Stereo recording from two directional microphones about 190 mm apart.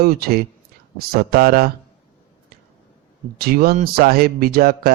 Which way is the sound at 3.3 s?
55° right (ahead or behind).